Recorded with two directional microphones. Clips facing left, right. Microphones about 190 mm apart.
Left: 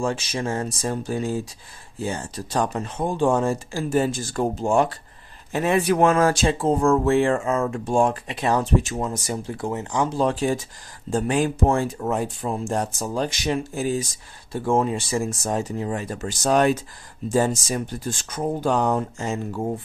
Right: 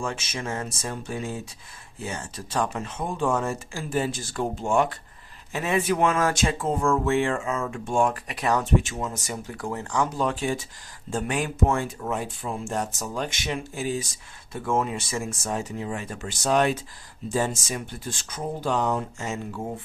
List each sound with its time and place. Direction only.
0.0 s speech: 35° left (ahead or behind)
14.5 s speech: 30° left (ahead or behind)